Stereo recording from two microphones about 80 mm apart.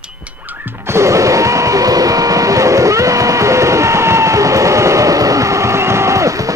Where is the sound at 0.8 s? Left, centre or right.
Right.